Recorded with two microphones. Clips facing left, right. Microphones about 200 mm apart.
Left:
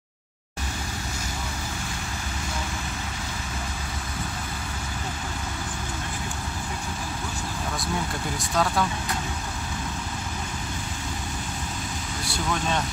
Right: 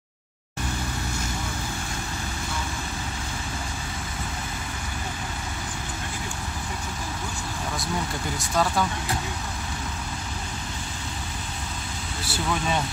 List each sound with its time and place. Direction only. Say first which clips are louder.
8.4 s speech: even; centre (ahead or behind)
12.3 s speech: right 1 dB; 5° right (ahead or behind)